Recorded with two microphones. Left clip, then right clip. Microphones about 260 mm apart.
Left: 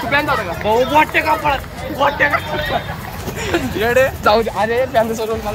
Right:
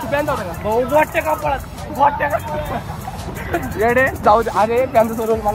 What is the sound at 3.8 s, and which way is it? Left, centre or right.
Speech, left.